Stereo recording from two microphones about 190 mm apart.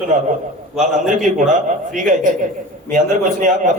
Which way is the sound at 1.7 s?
40° right (ahead or behind).